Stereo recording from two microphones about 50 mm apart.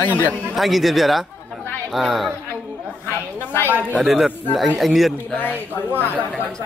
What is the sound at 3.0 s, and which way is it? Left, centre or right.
Speech, left.